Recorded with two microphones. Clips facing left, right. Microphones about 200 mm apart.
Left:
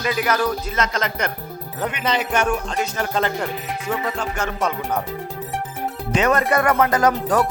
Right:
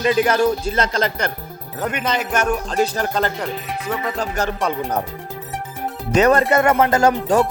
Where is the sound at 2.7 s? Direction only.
35° right (ahead or behind).